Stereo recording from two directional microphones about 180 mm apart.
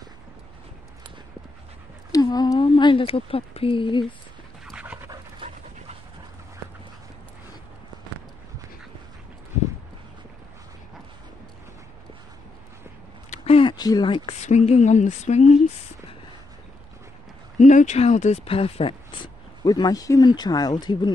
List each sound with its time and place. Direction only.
2.1 s speech: 20° left (ahead or behind)
4.6 s pant: 5° right (ahead or behind)
13.3 s speech: 30° left (ahead or behind)
17.6 s speech: 45° left (ahead or behind); by 21.1 s 25° left (ahead or behind)